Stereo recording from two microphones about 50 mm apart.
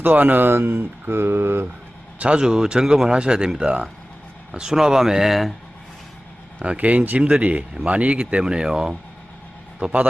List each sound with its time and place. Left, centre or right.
0.0 s speech: right
2.1 s speech: right
2.4 s speech: centre
4.5 s speech: centre
6.6 s speech: right
7.2 s speech: right
9.8 s speech: right